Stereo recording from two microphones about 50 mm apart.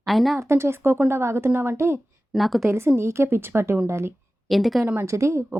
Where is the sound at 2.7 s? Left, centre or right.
Right.